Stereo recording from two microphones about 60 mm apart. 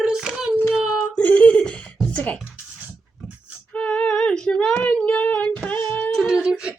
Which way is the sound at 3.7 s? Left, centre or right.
Centre.